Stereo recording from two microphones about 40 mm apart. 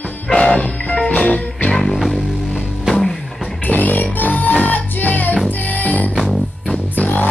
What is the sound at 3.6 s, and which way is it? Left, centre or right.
Music, left.